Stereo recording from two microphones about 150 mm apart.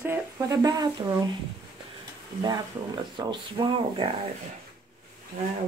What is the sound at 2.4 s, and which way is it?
Speech, 30° right (ahead or behind).